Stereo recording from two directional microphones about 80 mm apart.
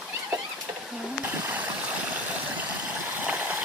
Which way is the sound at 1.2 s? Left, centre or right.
Right.